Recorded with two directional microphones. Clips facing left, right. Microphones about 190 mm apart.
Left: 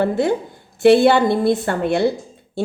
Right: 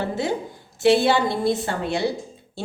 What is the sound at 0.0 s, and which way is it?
A woman's voice, 55° left (ahead or behind).